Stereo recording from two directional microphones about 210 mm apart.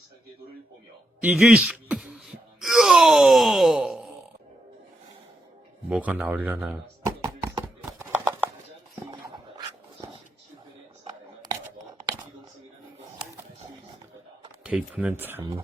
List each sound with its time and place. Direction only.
1.2 s wail: 5° right (ahead or behind)
5.9 s a sound: 5° right (ahead or behind)
9.6 s dog: 20° right (ahead or behind)
14.6 s speech: 5° right (ahead or behind)